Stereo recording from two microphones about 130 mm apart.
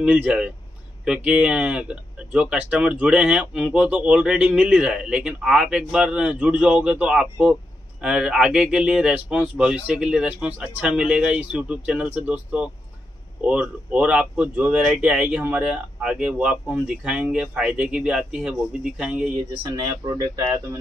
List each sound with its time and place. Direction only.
0.0 s speech: 10° right (ahead or behind)
19.7 s speech: 30° right (ahead or behind)